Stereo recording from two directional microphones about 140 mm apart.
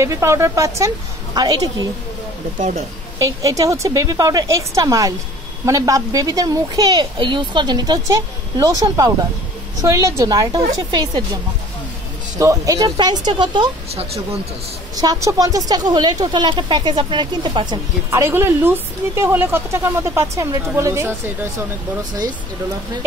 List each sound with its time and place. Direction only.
0.0 s a woman's voice: 20° right (ahead or behind)
3.2 s a woman's voice: 25° right (ahead or behind)
12.4 s a woman's voice: 25° right (ahead or behind)
15.0 s speech: 25° right (ahead or behind)
18.1 s speech: 20° right (ahead or behind)